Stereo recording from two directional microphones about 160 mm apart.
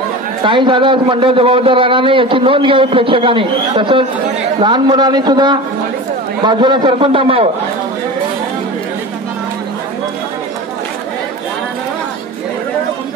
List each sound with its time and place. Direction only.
0.4 s a man's voice: 30° right (ahead or behind)